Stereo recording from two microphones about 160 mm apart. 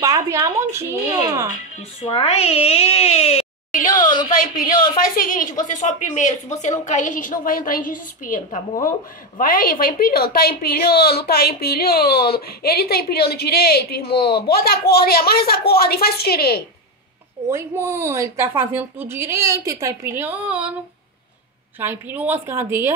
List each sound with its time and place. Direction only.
0.0 s speech: 20° right (ahead or behind)
2.0 s speech: 40° left (ahead or behind)
3.8 s a sound: 25° left (ahead or behind)
4.3 s a woman's voice: 60° left (ahead or behind)
9.4 s a woman's voice: 65° left (ahead or behind)
17.5 s speech: 15° right (ahead or behind)
21.7 s speech: 10° right (ahead or behind)